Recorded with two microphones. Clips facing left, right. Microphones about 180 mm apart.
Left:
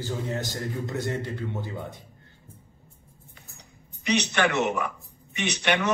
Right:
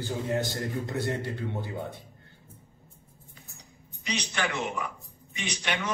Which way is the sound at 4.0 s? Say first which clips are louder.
Left 7 dB; 65° left (ahead or behind).